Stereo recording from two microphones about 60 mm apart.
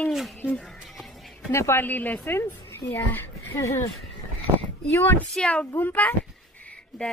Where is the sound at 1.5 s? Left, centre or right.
Left.